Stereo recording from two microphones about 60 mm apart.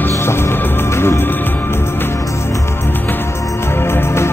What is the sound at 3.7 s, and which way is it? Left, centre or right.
Music, left.